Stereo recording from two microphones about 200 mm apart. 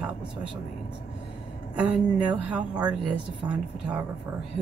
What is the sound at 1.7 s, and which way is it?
Speech, 5° right (ahead or behind).